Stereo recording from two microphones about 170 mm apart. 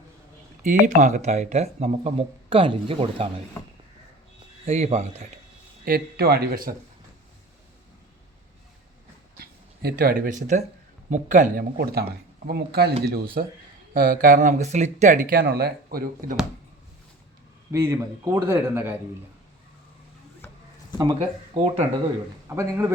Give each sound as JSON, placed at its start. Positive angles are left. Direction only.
{"t": 0.6, "sound": "speech", "side_deg": -45}
{"t": 4.6, "sound": "speech", "side_deg": -40}
{"t": 5.8, "sound": "speech", "side_deg": -65}
{"t": 9.4, "sound": "speech", "side_deg": -65}
{"t": 11.8, "sound": "speech", "side_deg": -65}
{"t": 15.4, "sound": "speech", "side_deg": -65}
{"t": 17.7, "sound": "a man's voice", "side_deg": -15}
{"t": 21.5, "sound": "speech", "side_deg": -40}
{"t": 22.4, "sound": "a man's voice", "side_deg": -15}